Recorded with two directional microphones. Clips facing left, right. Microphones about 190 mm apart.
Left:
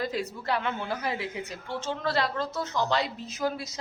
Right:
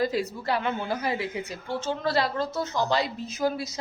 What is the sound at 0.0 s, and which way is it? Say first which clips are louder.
A woman's voice: right 4 dB; 5° right (ahead or behind).